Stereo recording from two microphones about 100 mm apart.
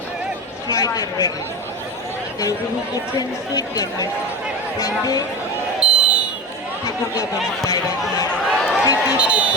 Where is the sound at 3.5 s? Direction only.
40° left (ahead or behind).